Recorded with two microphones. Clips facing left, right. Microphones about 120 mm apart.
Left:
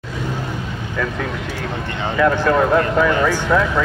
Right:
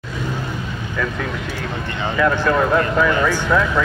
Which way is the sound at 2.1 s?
35° left (ahead or behind).